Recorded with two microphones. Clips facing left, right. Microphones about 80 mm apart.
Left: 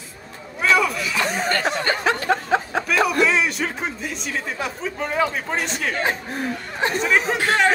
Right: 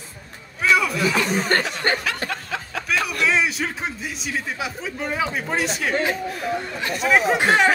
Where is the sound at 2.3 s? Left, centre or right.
Left.